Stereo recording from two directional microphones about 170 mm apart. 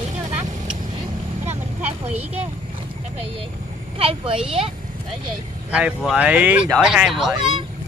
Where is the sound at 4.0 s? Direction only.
35° right (ahead or behind).